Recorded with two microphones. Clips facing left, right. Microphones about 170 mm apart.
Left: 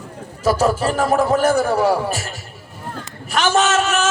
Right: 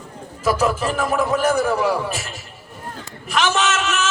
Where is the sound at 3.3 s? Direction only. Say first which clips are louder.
Left 3 dB; 35° left (ahead or behind).